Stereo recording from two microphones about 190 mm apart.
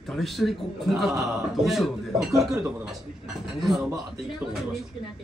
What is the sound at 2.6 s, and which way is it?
Speech, 10° right (ahead or behind).